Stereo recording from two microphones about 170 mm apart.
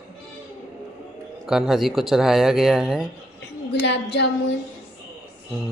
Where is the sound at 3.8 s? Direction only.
90° left.